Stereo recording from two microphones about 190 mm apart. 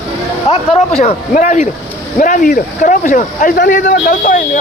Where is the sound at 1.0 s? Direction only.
40° left (ahead or behind).